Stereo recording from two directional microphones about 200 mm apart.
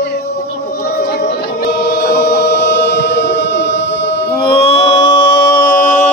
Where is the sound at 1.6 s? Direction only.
55° left (ahead or behind).